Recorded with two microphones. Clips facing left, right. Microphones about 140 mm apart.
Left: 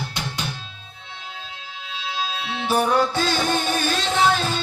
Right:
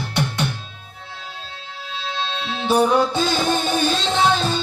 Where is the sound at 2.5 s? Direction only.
25° right (ahead or behind).